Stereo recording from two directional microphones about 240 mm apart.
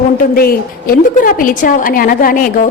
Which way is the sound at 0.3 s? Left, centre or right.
Left.